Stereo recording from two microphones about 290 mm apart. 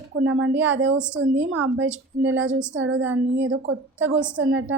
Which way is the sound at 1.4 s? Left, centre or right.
Right.